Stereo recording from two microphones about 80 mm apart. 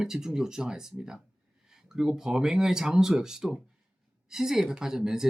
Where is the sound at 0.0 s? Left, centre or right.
Centre.